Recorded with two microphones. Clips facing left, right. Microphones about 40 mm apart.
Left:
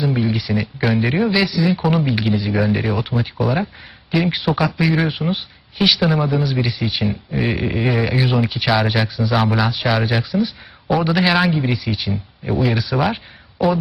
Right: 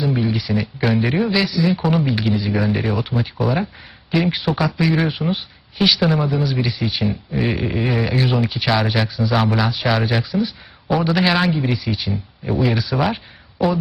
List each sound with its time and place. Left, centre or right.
0.0 s speech: centre